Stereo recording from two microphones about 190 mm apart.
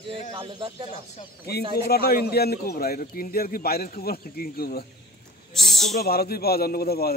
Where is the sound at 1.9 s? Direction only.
55° left (ahead or behind).